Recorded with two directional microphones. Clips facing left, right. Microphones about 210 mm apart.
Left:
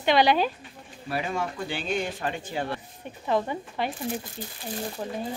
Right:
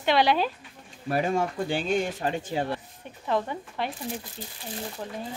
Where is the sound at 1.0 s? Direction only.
45° right (ahead or behind).